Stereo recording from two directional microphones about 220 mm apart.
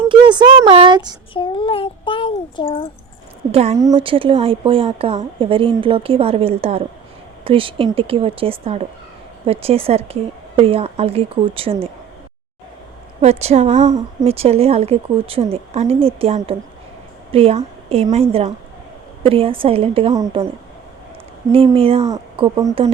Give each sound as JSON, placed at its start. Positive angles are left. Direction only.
{"t": 0.1, "sound": "speech", "side_deg": -20}
{"t": 1.3, "sound": "a child's voice", "side_deg": 25}
{"t": 3.5, "sound": "a woman's voice", "side_deg": -30}
{"t": 13.2, "sound": "a woman's voice", "side_deg": -30}
{"t": 21.5, "sound": "a woman's voice", "side_deg": -25}